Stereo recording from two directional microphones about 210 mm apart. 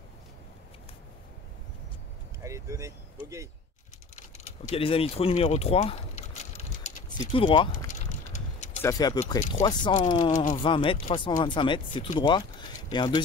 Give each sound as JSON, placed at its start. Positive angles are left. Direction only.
{"t": 2.4, "sound": "vehicle", "side_deg": -15}
{"t": 4.1, "sound": "speech", "side_deg": 35}
{"t": 6.8, "sound": "a sound", "side_deg": 30}
{"t": 7.7, "sound": "a sound", "side_deg": 35}
{"t": 8.8, "sound": "speech", "side_deg": 20}
{"t": 10.3, "sound": "speech", "side_deg": 35}
{"t": 10.6, "sound": "speech", "side_deg": 25}